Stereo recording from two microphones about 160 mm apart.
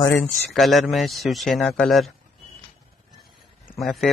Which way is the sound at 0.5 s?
Centre (ahead or behind).